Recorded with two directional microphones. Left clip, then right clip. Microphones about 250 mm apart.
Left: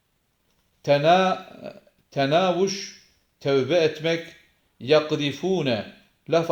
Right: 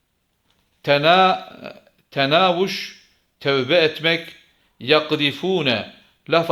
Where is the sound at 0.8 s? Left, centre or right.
Centre.